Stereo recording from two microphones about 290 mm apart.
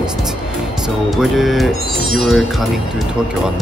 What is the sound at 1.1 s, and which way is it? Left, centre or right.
Speech, centre.